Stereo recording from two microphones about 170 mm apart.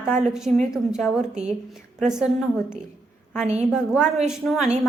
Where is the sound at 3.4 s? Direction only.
40° right (ahead or behind).